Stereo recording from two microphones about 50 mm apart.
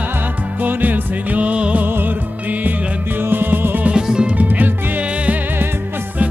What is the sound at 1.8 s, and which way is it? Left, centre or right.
Music, right.